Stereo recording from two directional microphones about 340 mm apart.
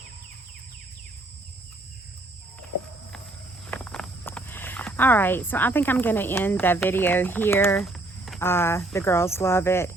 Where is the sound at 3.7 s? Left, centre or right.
Centre.